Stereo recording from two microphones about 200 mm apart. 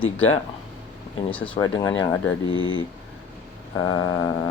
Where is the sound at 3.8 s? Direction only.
20° left (ahead or behind).